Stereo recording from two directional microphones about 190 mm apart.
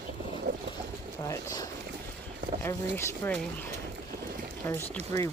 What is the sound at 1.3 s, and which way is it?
Speech, 15° left (ahead or behind).